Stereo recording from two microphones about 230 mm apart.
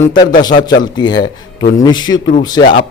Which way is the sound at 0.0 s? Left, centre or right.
Centre.